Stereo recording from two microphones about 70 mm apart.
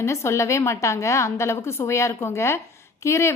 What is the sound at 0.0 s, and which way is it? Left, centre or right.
A woman's voice, left.